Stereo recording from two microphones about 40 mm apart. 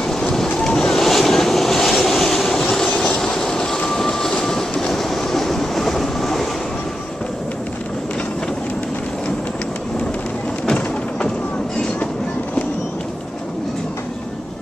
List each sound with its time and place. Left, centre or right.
0.0 s wind: centre
0.7 s waves: centre
3.1 s train: centre